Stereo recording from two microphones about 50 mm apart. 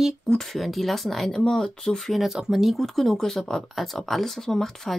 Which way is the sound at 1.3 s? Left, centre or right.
Centre.